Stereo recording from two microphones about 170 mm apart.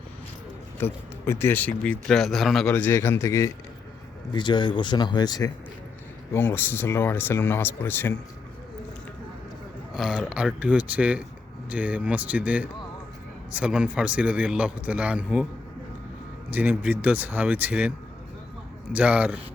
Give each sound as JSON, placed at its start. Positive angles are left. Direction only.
{"t": 0.8, "sound": "speech", "side_deg": 15}
{"t": 6.3, "sound": "speech", "side_deg": 15}
{"t": 9.9, "sound": "a man's voice", "side_deg": -5}
{"t": 16.5, "sound": "a man's voice", "side_deg": -10}
{"t": 18.9, "sound": "a man's voice", "side_deg": -10}